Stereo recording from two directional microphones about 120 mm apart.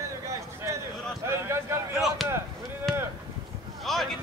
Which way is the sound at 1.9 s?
Centre (ahead or behind).